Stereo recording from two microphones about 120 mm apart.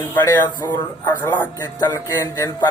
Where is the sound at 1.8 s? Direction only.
30° left (ahead or behind).